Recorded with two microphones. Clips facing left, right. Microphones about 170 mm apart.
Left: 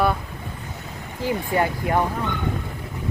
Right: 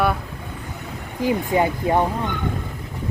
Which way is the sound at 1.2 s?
20° right (ahead or behind).